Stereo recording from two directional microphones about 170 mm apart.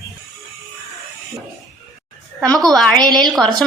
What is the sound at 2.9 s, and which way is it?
Speech, 25° right (ahead or behind).